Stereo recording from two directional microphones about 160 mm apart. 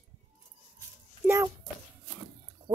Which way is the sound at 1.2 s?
20° right (ahead or behind).